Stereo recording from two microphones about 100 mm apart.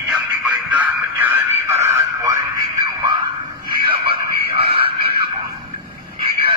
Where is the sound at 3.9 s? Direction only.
65° right (ahead or behind).